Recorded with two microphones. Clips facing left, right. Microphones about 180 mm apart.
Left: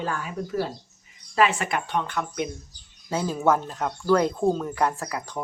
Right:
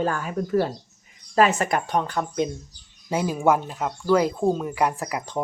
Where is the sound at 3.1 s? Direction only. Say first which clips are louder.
Right 2 dB; 15° right (ahead or behind).